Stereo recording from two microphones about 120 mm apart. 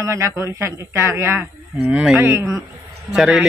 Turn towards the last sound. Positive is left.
turn(degrees=-5)  # may be behind; listen again after turning